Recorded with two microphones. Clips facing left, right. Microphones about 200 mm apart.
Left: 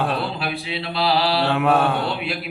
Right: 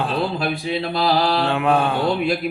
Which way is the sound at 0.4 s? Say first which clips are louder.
Right 5 dB; 45° right (ahead or behind).